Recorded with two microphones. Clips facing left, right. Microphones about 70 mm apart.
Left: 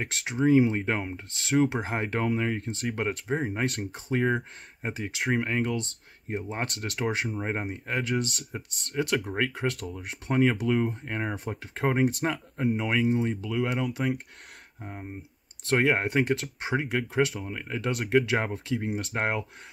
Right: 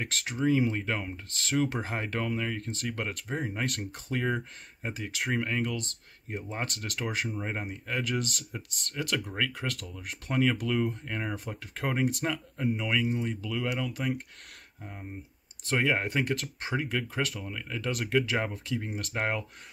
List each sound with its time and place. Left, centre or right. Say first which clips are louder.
0.0 s speech: left 3 dB; centre
8.2 s speech: left 3 dB; right
9.2 s speech: left 4 dB; left